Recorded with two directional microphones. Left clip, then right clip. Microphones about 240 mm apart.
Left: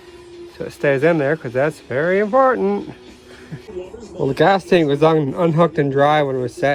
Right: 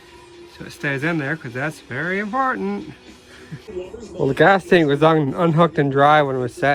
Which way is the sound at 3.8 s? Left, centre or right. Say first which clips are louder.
Even; centre.